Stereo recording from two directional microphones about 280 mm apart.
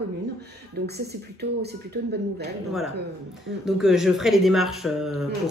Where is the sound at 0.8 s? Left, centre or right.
Right.